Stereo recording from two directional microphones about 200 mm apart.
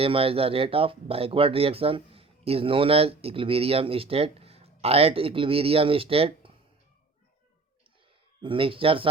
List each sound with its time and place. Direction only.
0.0 s speech: 30° right (ahead or behind)
8.4 s speech: 25° right (ahead or behind)